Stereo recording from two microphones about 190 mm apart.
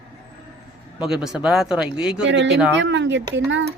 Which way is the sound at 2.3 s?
70° right (ahead or behind).